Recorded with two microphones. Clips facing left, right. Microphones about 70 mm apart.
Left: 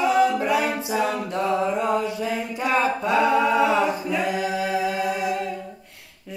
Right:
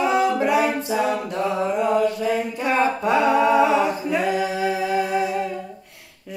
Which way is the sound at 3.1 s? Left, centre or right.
Centre.